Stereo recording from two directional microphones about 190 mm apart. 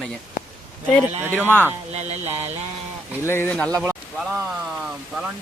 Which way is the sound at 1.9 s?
35° right (ahead or behind).